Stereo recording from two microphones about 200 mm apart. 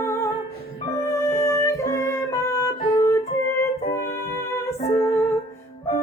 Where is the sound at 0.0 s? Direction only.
15° left (ahead or behind).